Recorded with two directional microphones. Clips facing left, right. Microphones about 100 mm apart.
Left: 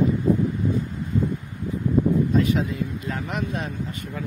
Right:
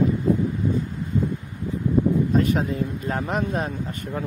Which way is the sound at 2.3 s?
45° right (ahead or behind).